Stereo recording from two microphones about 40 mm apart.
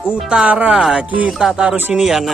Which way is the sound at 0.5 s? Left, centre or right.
Right.